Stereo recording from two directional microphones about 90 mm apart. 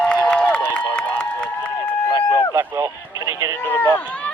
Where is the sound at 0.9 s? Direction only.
10° left (ahead or behind).